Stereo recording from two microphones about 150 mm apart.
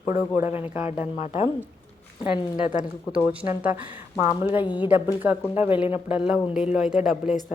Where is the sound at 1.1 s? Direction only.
45° left (ahead or behind).